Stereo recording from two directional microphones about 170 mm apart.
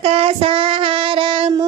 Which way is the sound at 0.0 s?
35° right (ahead or behind).